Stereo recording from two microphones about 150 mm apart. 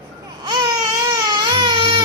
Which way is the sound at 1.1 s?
30° right (ahead or behind).